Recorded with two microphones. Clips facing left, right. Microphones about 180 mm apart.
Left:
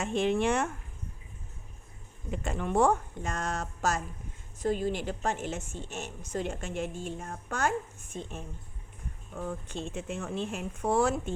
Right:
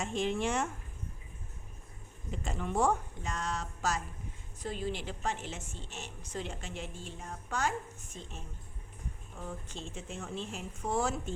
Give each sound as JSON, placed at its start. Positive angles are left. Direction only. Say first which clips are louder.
{"t": 0.0, "sound": "speech", "louder": "left 5 dB", "side_deg": 65}
{"t": 2.3, "sound": "a woman's voice", "louder": "left 5 dB", "side_deg": 60}